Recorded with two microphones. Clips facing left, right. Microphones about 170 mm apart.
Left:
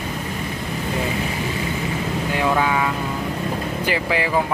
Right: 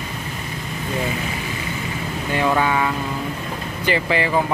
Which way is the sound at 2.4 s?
5° left (ahead or behind).